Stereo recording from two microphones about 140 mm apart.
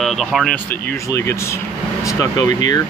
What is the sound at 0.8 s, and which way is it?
Speech, 20° left (ahead or behind).